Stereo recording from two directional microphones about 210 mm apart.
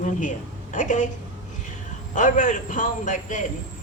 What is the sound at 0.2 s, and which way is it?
Speech, 35° left (ahead or behind).